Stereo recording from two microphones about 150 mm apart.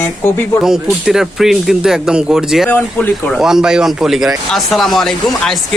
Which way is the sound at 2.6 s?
10° left (ahead or behind).